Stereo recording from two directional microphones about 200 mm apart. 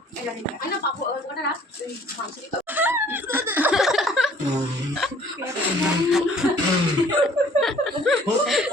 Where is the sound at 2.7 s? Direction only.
10° right (ahead or behind).